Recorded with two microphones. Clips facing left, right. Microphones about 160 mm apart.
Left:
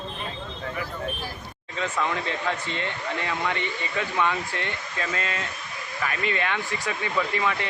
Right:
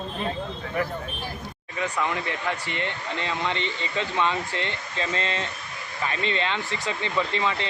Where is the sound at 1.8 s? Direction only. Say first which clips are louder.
Even; 15° right (ahead or behind).